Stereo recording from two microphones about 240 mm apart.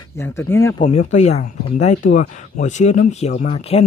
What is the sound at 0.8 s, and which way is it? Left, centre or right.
Speech, left.